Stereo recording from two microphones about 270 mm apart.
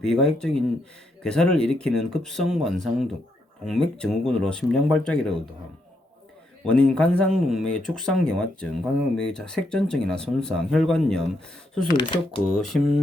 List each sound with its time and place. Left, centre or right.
0.0 s speech: centre
6.7 s speech: centre
11.9 s speech: centre
12.5 s speech: centre